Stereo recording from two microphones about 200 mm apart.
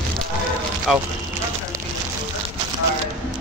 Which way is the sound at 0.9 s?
5° right (ahead or behind).